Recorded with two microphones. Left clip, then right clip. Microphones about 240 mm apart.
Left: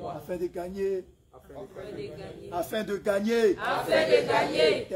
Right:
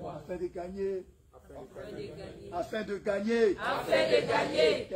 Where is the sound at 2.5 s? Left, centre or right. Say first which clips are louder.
Left 4 dB; left.